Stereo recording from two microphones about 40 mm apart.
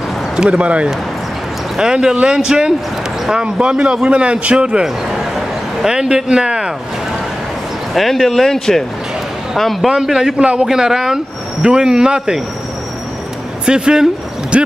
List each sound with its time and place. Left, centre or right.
0.5 s speech: right
1.8 s speech: centre
4.8 s a sound: centre
7.9 s a man's voice: centre
9.8 s speech: centre
10.4 s speech: right
13.7 s speech: right